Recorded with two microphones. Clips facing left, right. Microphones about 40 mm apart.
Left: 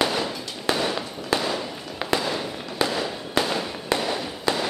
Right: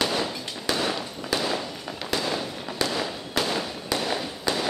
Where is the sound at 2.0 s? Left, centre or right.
Centre.